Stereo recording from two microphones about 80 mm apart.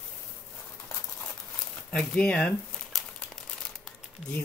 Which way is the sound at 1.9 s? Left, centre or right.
Centre.